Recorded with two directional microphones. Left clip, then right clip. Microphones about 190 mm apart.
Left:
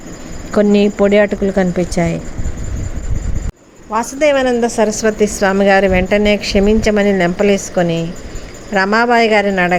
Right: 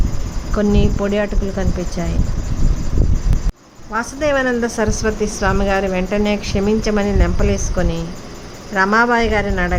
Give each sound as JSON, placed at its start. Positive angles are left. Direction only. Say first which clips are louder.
{"t": 0.5, "sound": "a woman's voice", "louder": "left 7 dB", "side_deg": 25}
{"t": 3.9, "sound": "a woman's voice", "louder": "left 5 dB", "side_deg": 20}